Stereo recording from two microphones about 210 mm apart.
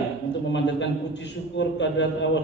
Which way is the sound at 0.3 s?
60° left (ahead or behind).